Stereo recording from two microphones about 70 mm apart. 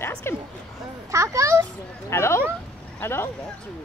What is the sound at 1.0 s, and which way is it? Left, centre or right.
Speech, right.